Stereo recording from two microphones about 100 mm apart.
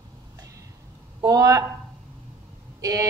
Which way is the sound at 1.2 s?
35° right (ahead or behind).